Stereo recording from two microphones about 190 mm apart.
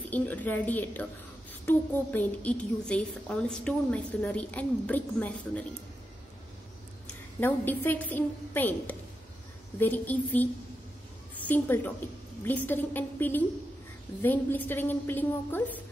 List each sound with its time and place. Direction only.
0.1 s a woman's voice: 10° left (ahead or behind)
7.3 s a woman's voice: 10° left (ahead or behind)